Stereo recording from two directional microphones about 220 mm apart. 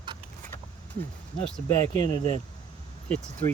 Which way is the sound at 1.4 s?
5° left (ahead or behind).